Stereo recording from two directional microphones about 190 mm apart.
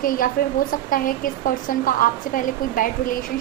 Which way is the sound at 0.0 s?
45° left (ahead or behind).